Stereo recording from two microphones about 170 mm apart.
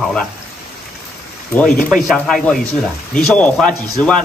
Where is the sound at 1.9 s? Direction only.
Centre (ahead or behind).